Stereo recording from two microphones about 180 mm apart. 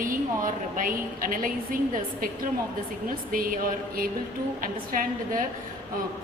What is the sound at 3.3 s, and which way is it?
A woman's voice, 50° right (ahead or behind).